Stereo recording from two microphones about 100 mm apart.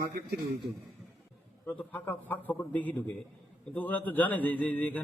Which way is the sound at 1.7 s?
15° left (ahead or behind).